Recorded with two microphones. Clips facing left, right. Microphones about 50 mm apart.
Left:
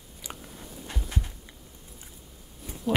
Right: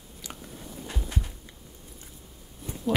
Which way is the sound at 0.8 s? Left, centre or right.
Centre.